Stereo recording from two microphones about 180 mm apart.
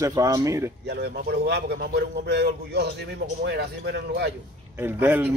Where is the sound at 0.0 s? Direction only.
20° right (ahead or behind).